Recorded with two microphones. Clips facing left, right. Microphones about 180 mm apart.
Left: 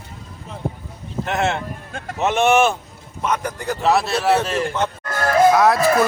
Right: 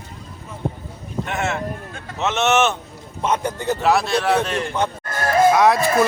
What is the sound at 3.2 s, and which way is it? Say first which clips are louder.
Speech: right 2 dB; 25° right (ahead or behind).